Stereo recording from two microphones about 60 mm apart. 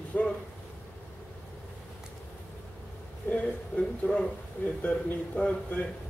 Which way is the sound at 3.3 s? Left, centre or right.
Left.